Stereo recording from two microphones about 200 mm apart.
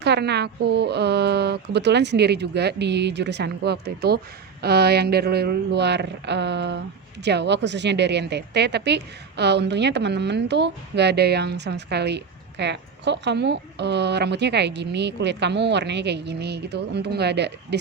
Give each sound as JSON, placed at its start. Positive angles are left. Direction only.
{"t": 0.0, "sound": "a woman's voice", "side_deg": -55}